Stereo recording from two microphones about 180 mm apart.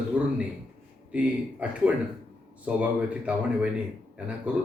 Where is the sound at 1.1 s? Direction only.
5° right (ahead or behind).